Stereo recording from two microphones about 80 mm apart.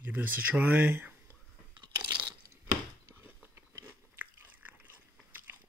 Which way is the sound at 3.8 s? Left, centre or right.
Right.